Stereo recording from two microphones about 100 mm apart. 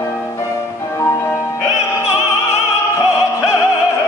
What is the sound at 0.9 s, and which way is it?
Opera, 25° left (ahead or behind).